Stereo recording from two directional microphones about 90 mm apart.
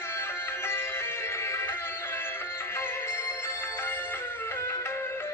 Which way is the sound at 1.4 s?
30° left (ahead or behind).